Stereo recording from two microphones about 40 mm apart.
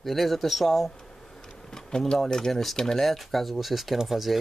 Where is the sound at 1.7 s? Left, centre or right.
Centre.